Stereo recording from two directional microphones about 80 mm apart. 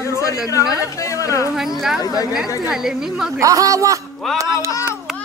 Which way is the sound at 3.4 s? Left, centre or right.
Right.